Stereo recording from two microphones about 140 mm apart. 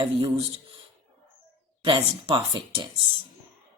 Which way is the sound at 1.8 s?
40° right (ahead or behind).